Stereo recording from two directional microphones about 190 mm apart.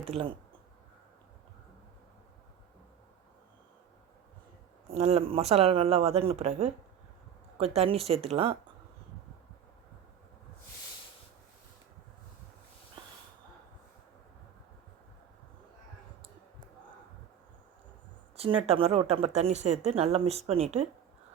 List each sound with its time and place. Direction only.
0.1 s speech: 30° right (ahead or behind)
4.9 s speech: 35° right (ahead or behind)
18.3 s speech: 30° right (ahead or behind)